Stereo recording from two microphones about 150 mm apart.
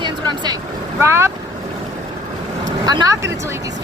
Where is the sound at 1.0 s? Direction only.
15° right (ahead or behind).